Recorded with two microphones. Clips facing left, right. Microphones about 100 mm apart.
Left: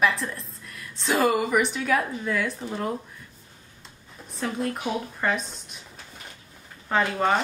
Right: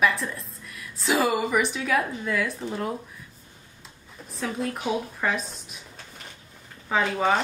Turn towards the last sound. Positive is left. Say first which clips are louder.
# even
turn(degrees=0)  # may be behind; listen again after turning